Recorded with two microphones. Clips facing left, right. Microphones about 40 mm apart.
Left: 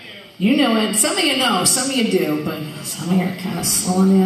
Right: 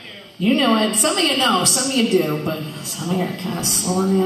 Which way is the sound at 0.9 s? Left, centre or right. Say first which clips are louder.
Even; left.